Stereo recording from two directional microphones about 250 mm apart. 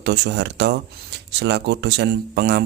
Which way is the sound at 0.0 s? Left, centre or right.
Right.